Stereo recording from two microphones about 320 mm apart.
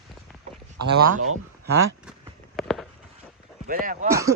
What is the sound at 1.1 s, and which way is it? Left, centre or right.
Speech, right.